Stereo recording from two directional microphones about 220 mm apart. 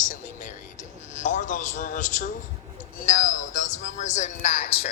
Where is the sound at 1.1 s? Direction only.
35° left (ahead or behind).